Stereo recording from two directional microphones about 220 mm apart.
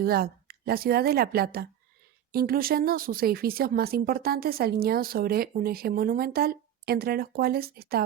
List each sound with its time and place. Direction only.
0.0 s speech: 45° right (ahead or behind)